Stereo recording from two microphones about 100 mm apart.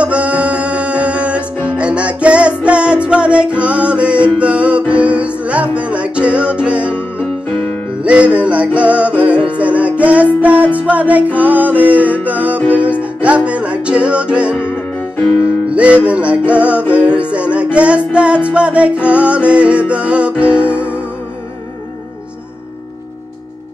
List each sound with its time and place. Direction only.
0.0 s music: 10° right (ahead or behind)
8.0 s music: 10° right (ahead or behind)
14.6 s music: 20° left (ahead or behind)
15.7 s music: 15° right (ahead or behind)